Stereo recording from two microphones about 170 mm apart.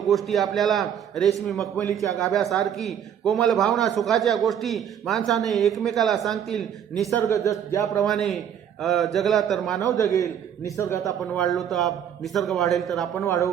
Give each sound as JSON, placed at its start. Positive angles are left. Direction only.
{"t": 0.1, "sound": "a man's voice", "side_deg": 0}
{"t": 1.7, "sound": "a man's voice", "side_deg": 15}
{"t": 2.0, "sound": "a man's voice", "side_deg": 0}
{"t": 7.2, "sound": "a man's voice", "side_deg": 15}
{"t": 8.0, "sound": "a man's voice", "side_deg": 0}
{"t": 10.0, "sound": "a man's voice", "side_deg": 20}
{"t": 11.4, "sound": "a man's voice", "side_deg": 0}
{"t": 13.2, "sound": "a man's voice", "side_deg": 20}